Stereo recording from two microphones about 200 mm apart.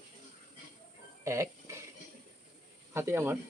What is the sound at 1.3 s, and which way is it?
Speech, 15° right (ahead or behind).